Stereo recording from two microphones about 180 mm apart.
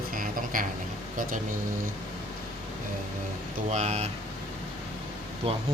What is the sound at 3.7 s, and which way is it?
Speech, 40° right (ahead or behind).